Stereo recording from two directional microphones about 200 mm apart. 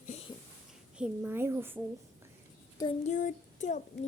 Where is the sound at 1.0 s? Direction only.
10° right (ahead or behind).